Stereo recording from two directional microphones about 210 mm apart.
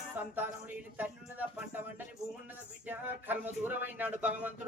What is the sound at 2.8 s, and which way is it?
Speech, 10° right (ahead or behind).